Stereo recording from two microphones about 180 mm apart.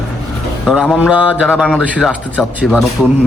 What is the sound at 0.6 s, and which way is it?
A man's voice, centre (ahead or behind).